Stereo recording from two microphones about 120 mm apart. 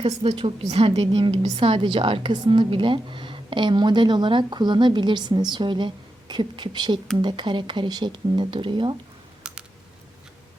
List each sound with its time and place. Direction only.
0.0 s a woman's voice: 50° right (ahead or behind)
9.5 s typing: 5° right (ahead or behind)